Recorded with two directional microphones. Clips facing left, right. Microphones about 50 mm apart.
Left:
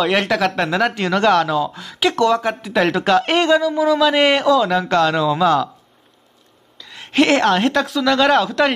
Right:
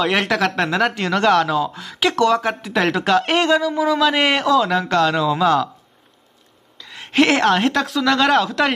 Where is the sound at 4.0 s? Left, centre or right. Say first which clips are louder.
Left 2 dB; centre.